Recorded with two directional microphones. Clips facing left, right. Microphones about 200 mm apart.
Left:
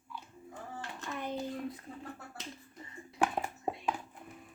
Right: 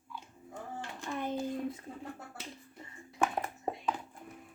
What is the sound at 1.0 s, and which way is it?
Hands, 30° right (ahead or behind).